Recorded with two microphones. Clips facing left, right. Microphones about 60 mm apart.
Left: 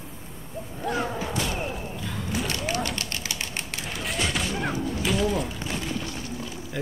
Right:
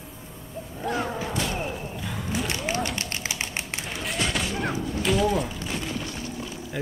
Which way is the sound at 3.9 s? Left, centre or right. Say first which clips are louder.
Even; centre.